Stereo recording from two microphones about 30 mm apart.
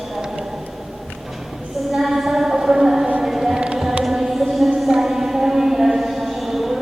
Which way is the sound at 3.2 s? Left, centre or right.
Centre.